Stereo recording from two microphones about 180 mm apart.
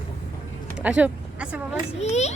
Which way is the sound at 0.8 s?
5° right (ahead or behind).